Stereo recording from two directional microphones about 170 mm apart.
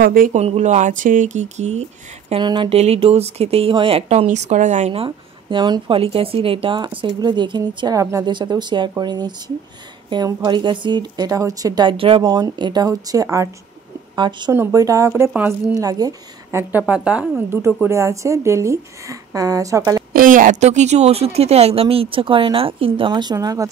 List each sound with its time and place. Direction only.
0.0 s speech: 60° right (ahead or behind)
0.3 s speech: 40° right (ahead or behind)
2.4 s a woman's voice: 25° right (ahead or behind)
16.7 s speech: 5° right (ahead or behind)
20.1 s speech: 55° right (ahead or behind); by 23.7 s 20° right (ahead or behind)